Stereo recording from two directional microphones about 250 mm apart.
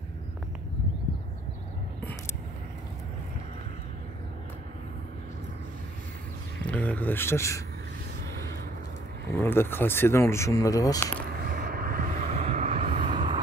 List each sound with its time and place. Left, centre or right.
6.6 s speech: centre
9.4 s speech: centre
11.2 s vehicle: right